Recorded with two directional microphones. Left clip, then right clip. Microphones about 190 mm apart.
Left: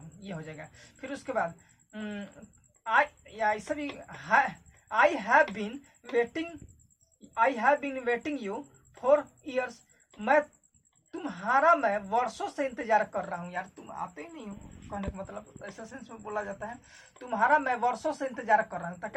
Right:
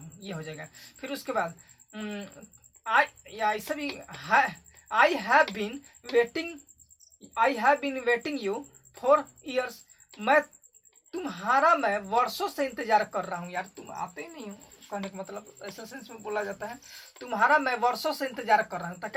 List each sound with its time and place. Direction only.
0.3 s a woman's voice: 30° right (ahead or behind)
5.2 s speech: 35° right (ahead or behind)
7.3 s a woman's voice: 25° right (ahead or behind)